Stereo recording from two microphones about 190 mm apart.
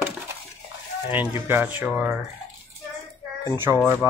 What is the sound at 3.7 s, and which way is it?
Speech, 15° right (ahead or behind).